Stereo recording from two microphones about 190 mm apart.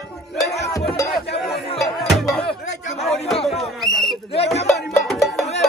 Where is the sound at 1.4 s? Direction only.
Centre (ahead or behind).